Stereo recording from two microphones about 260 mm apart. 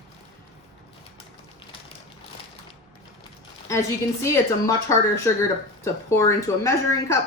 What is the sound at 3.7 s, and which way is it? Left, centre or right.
A woman's voice, centre.